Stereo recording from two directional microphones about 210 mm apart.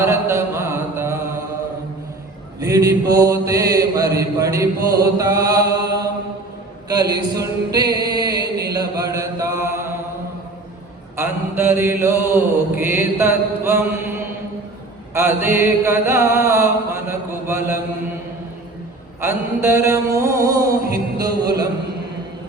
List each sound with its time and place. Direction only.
0.0 s mantra: 10° right (ahead or behind)
2.6 s mantra: 15° right (ahead or behind)
6.8 s a sound: 20° right (ahead or behind)
7.9 s chant: 20° right (ahead or behind)
8.7 s mantra: 15° right (ahead or behind)
11.2 s mantra: 10° right (ahead or behind)
19.2 s mantra: 10° right (ahead or behind)